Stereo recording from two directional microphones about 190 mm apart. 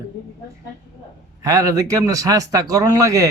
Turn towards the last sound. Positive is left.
turn(degrees=-15)  # may be behind; listen again after turning